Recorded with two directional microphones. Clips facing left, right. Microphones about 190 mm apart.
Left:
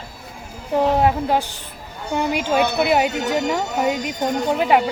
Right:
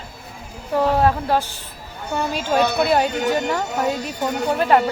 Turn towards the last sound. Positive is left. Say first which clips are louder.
# even
turn(degrees=10)  # may be behind; listen again after turning